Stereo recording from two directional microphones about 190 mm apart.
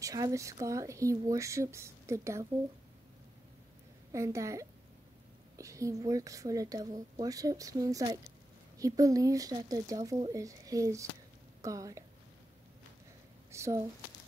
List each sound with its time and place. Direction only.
0.0 s speech: 20° right (ahead or behind)
4.1 s speech: 15° right (ahead or behind)
13.5 s a sound: 15° right (ahead or behind)